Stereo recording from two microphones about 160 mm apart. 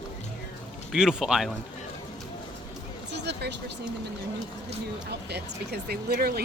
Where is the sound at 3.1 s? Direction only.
90° right.